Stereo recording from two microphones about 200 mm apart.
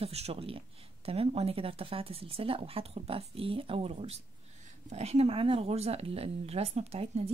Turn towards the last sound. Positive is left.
turn(degrees=-30)  # may be behind; listen again after turning